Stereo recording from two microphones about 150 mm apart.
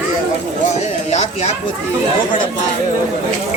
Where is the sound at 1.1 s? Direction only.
50° left (ahead or behind).